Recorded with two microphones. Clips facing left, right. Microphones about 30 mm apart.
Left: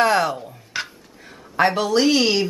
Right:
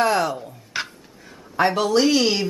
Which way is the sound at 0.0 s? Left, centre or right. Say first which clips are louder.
Left 2 dB; left.